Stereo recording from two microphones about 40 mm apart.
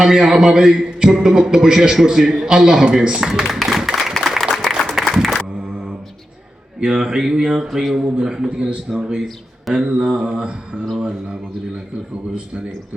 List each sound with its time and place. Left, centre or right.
0.0 s a man's voice: centre
4.1 s music: centre
6.7 s a man's voice: right
7.9 s mantra: centre
9.0 s a man's voice: centre
9.7 s mantra: right